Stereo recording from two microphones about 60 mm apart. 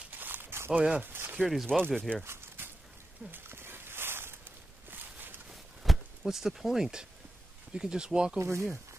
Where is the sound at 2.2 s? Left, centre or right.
Right.